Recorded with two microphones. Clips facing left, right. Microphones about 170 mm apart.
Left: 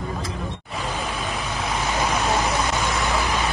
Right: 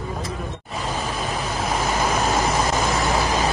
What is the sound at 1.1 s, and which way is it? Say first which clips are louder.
Vehicle: right 2 dB; 40° right (ahead or behind).